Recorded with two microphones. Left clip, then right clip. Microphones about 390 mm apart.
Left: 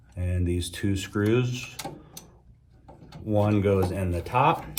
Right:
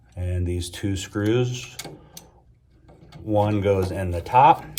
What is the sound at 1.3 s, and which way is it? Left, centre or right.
Speech, right.